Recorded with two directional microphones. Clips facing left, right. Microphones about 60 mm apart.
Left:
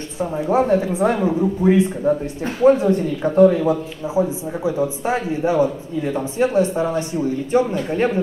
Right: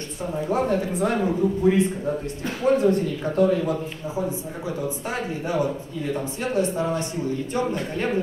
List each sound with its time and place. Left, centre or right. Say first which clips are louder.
0.2 s speech: left 6 dB; left
1.6 s a man's voice: left 6 dB; left